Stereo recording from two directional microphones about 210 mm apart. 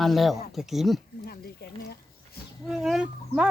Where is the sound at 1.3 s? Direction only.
50° left (ahead or behind).